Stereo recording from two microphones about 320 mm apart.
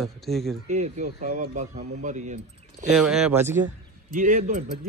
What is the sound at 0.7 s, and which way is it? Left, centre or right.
Speech, right.